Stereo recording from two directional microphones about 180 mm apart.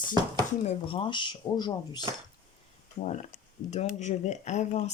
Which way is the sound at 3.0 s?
40° left (ahead or behind).